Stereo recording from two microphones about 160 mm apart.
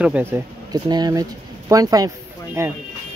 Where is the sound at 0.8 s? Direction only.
25° right (ahead or behind).